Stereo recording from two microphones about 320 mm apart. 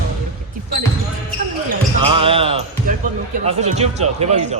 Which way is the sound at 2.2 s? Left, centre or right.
Centre.